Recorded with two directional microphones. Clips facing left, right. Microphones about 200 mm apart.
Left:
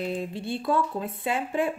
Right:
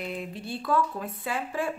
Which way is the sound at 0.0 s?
30° left (ahead or behind).